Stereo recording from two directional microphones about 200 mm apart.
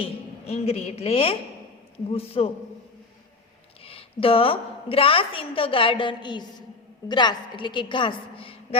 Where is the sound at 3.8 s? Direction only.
30° left (ahead or behind).